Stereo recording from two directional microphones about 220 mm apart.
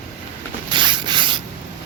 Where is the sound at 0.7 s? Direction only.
20° right (ahead or behind).